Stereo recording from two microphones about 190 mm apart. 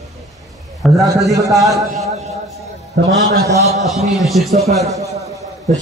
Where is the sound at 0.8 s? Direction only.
Centre (ahead or behind).